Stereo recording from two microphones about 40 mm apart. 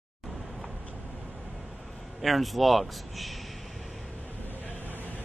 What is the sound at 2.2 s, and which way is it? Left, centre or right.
Speech, centre.